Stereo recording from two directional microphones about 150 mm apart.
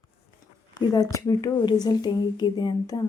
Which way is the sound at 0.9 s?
25° left (ahead or behind).